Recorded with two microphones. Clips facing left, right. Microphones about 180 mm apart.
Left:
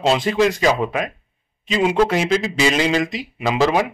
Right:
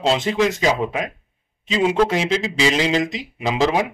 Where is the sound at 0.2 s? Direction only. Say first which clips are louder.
Left 2 dB; 25° right (ahead or behind).